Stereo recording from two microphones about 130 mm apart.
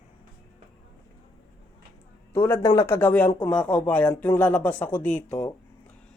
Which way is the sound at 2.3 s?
20° left (ahead or behind).